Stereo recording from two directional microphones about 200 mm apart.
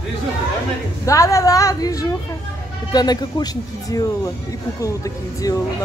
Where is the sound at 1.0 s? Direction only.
15° left (ahead or behind).